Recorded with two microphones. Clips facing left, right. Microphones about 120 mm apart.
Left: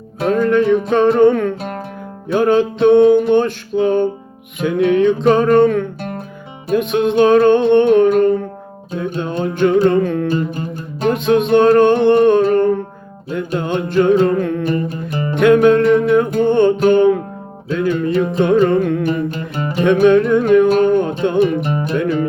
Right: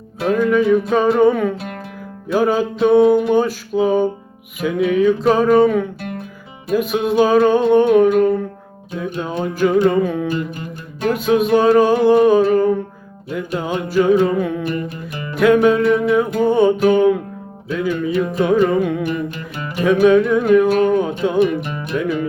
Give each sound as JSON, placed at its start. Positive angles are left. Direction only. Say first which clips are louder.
{"t": 0.3, "sound": "music", "louder": "left 1 dB", "side_deg": -5}
{"t": 6.0, "sound": "music", "louder": "left 2 dB", "side_deg": 35}
{"t": 6.7, "sound": "music", "louder": "left 2 dB", "side_deg": -5}
{"t": 10.3, "sound": "music", "louder": "left 4 dB", "side_deg": 35}
{"t": 11.1, "sound": "music", "louder": "left 2 dB", "side_deg": -5}
{"t": 14.7, "sound": "music", "louder": "left 4 dB", "side_deg": 35}
{"t": 15.4, "sound": "music", "louder": "left 2 dB", "side_deg": 0}
{"t": 19.0, "sound": "music", "louder": "left 4 dB", "side_deg": 35}
{"t": 19.8, "sound": "music", "louder": "left 1 dB", "side_deg": -5}
{"t": 21.6, "sound": "music", "louder": "left 7 dB", "side_deg": 40}
{"t": 21.9, "sound": "music", "louder": "left 1 dB", "side_deg": -5}